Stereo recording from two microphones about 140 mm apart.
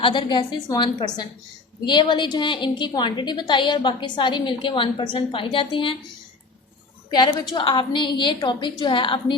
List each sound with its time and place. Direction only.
0.0 s a woman's voice: 35° left (ahead or behind)
7.1 s a woman's voice: 30° left (ahead or behind)